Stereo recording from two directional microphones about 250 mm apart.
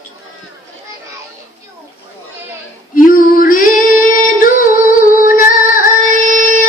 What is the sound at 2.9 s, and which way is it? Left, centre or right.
Female singing, left.